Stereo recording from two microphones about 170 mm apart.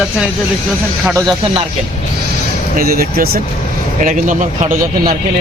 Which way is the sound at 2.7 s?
60° right (ahead or behind).